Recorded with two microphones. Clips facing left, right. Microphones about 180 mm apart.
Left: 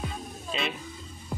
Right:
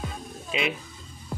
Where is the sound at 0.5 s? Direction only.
10° right (ahead or behind).